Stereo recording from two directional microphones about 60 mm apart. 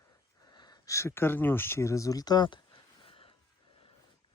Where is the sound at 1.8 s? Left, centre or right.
Left.